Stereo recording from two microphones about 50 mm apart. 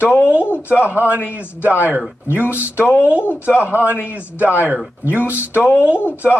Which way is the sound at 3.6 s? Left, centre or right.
Right.